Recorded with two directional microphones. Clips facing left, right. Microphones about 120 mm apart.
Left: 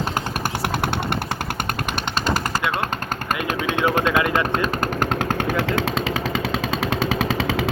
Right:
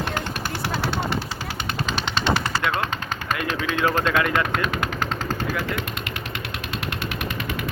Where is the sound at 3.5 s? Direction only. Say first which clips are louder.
Left 3 dB; 50° left (ahead or behind).